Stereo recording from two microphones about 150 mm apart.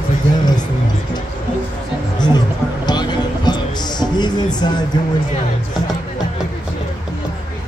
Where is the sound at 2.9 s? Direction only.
30° left (ahead or behind).